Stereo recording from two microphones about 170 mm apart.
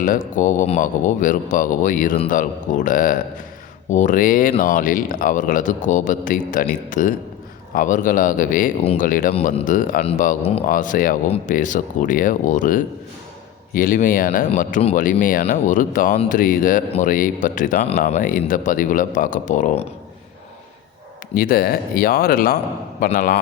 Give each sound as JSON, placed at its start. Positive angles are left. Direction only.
{"t": 0.0, "sound": "a man's voice", "side_deg": 50}
{"t": 10.0, "sound": "a man's voice", "side_deg": 35}
{"t": 10.7, "sound": "a man's voice", "side_deg": 50}
{"t": 14.5, "sound": "a man's voice", "side_deg": 45}
{"t": 15.1, "sound": "a man's voice", "side_deg": 60}
{"t": 21.3, "sound": "a man's voice", "side_deg": 60}